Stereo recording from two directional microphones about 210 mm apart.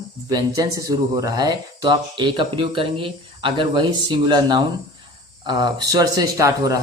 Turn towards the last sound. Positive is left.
turn(degrees=-15)  # may be behind; listen again after turning